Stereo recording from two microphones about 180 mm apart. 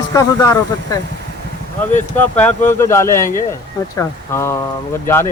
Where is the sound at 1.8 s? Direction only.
10° left (ahead or behind).